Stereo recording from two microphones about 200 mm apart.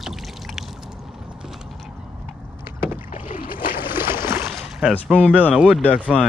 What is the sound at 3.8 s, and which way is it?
Boat, 10° right (ahead or behind).